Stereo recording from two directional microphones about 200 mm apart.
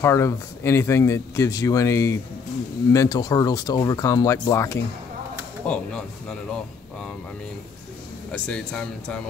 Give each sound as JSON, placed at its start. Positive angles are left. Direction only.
{"t": 0.0, "sound": "speech", "side_deg": 15}
{"t": 8.3, "sound": "speech", "side_deg": 5}